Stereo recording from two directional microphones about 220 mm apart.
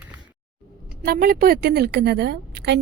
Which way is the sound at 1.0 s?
45° right (ahead or behind).